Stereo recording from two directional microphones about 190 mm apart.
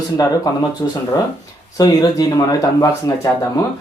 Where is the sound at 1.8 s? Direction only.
20° left (ahead or behind).